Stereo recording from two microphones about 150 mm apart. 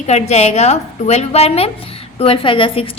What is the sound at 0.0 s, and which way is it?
A woman's voice, 45° left (ahead or behind).